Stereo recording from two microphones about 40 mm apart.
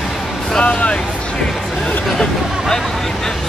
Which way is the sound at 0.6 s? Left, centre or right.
Left.